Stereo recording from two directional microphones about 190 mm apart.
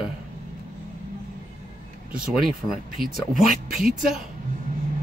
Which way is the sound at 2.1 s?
5° right (ahead or behind).